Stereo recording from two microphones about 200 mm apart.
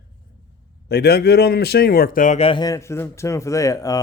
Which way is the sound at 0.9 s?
55° left (ahead or behind).